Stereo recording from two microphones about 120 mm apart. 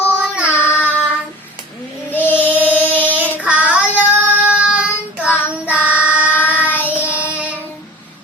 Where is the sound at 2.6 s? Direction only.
15° left (ahead or behind).